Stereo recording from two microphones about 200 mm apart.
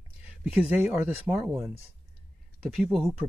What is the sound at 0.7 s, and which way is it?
Speech, 5° right (ahead or behind).